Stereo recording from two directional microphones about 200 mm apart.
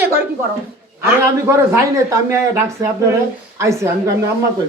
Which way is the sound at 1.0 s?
10° right (ahead or behind).